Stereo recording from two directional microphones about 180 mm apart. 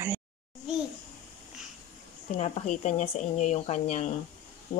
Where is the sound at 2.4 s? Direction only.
40° left (ahead or behind).